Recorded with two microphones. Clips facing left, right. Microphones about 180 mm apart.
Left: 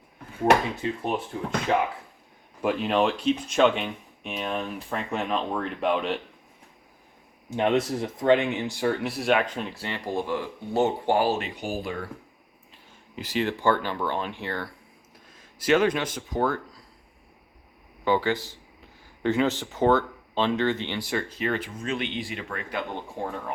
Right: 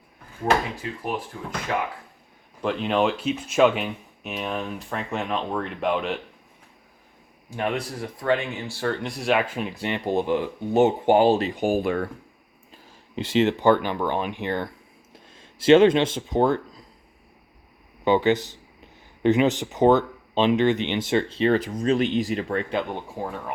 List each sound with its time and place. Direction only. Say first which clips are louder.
0.8 s speech: left 2 dB; 25° left (ahead or behind)
2.6 s speech: right 1 dB; 5° left (ahead or behind)
7.5 s speech: left 4 dB; 20° left (ahead or behind); by 11.3 s 20° right (ahead or behind)
11.3 s speech: right 6 dB; 40° right (ahead or behind)
11.6 s speech: right 8 dB; 55° right (ahead or behind)
13.1 s speech: right 6 dB; 25° right (ahead or behind)
18.0 s speech: right 4 dB; 20° right (ahead or behind)
23.2 s speech: even; 5° right (ahead or behind)